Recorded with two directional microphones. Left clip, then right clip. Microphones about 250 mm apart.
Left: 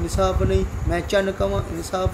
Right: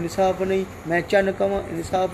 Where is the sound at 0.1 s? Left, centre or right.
Centre.